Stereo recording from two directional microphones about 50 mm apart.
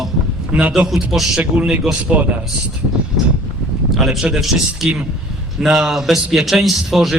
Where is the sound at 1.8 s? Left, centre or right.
Centre.